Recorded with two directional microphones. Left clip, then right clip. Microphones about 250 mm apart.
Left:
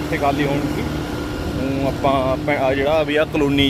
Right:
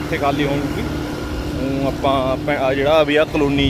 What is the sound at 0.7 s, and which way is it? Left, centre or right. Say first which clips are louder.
Vehicle: even; left.